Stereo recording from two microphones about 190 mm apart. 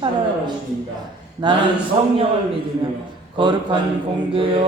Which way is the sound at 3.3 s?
25° right (ahead or behind).